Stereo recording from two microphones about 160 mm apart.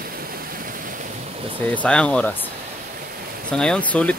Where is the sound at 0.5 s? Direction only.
60° right (ahead or behind).